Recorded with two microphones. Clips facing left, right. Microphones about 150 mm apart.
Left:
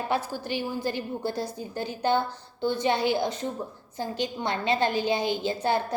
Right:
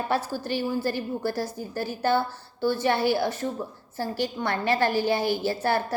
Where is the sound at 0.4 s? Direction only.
15° left (ahead or behind).